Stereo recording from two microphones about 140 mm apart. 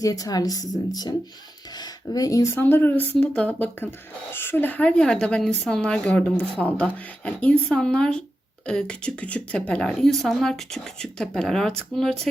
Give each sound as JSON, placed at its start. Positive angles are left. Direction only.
{"t": 0.0, "sound": "a woman's voice", "side_deg": 25}